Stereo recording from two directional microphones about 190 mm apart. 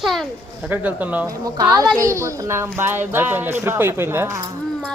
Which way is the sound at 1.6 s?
20° right (ahead or behind).